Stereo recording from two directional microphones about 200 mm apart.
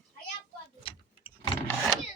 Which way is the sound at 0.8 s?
25° left (ahead or behind).